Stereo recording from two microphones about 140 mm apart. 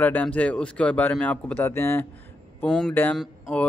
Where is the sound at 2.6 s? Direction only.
5° left (ahead or behind).